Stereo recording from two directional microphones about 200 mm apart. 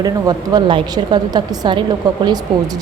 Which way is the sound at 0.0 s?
20° right (ahead or behind).